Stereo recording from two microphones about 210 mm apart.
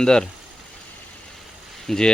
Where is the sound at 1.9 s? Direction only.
5° left (ahead or behind).